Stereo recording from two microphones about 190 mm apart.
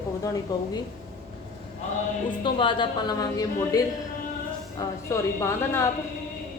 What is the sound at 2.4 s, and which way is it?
A woman's voice, 25° left (ahead or behind).